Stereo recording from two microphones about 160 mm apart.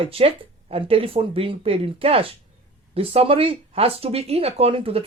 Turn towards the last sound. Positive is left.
turn(degrees=-35)  # may be behind; listen again after turning